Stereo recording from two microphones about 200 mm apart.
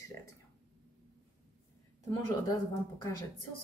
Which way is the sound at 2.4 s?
20° left (ahead or behind).